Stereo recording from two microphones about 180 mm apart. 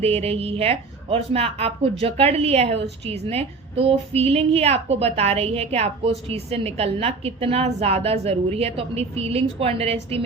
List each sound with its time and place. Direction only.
0.0 s a woman's voice: 35° right (ahead or behind)